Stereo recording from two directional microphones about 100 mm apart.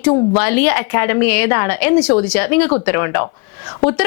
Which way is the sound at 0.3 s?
20° left (ahead or behind).